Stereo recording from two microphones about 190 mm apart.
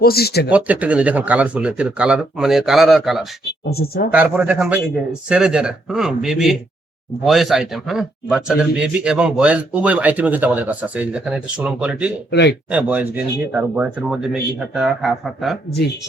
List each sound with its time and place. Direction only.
0.0 s speech: 55° left (ahead or behind)
0.5 s a man's voice: 5° right (ahead or behind)
3.7 s speech: 55° left (ahead or behind)
4.1 s a man's voice: 10° right (ahead or behind)
12.3 s speech: 60° left (ahead or behind)
12.7 s a man's voice: 10° right (ahead or behind)